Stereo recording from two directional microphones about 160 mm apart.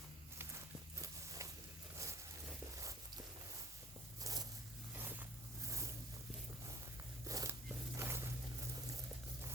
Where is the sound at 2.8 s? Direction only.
20° right (ahead or behind).